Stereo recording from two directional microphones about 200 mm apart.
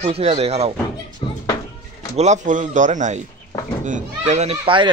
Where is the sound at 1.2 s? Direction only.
25° left (ahead or behind).